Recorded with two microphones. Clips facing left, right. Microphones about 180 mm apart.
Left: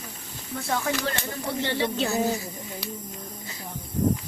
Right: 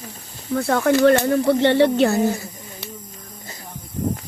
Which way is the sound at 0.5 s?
65° right (ahead or behind).